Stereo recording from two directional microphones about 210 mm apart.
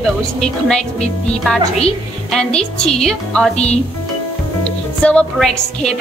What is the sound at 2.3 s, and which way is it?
A woman's voice, 5° left (ahead or behind).